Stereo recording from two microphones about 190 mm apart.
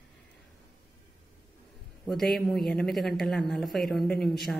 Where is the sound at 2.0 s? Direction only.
Centre (ahead or behind).